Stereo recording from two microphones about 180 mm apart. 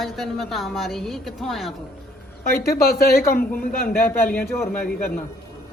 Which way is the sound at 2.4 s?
55° left (ahead or behind).